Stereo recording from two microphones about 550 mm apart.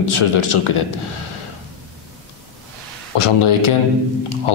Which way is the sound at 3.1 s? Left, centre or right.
Left.